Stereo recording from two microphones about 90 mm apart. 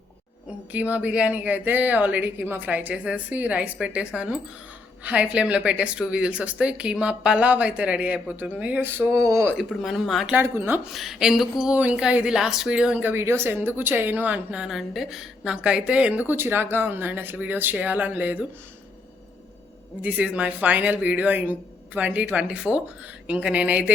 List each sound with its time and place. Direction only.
0.7 s a woman's voice: 15° right (ahead or behind)
9.2 s speech: 40° right (ahead or behind)
9.6 s speech: centre (ahead or behind)
10.4 s a woman's voice: 25° right (ahead or behind)
10.9 s speech: centre (ahead or behind)
11.6 s a woman's voice: 15° right (ahead or behind)
13.0 s a woman's voice: 25° right (ahead or behind)
20.0 s a woman's voice: 15° right (ahead or behind)